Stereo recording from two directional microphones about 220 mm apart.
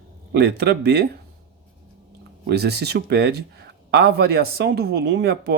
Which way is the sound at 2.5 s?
50° right (ahead or behind).